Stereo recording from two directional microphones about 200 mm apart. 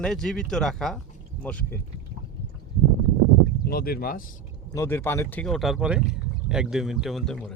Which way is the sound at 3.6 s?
50° left (ahead or behind).